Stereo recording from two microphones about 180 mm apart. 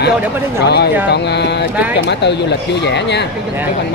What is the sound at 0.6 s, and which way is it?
Speech, 65° left (ahead or behind).